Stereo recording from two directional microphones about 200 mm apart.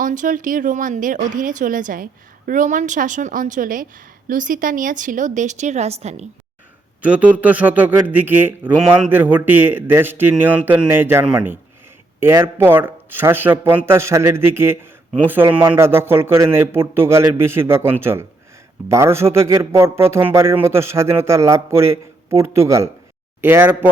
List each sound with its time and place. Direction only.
0.0 s a woman's voice: 40° right (ahead or behind)
7.0 s a man's voice: 5° right (ahead or behind)